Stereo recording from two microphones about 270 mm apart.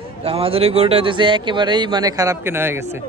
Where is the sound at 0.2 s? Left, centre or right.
Right.